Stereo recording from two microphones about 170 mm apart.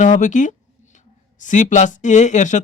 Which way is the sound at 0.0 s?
45° left (ahead or behind).